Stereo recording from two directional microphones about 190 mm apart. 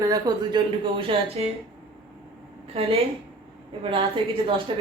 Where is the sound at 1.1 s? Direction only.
30° right (ahead or behind).